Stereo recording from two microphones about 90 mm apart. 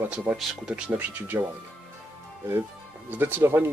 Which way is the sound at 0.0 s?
15° right (ahead or behind).